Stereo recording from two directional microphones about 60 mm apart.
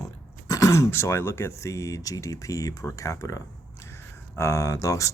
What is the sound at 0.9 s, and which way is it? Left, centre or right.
Speech, left.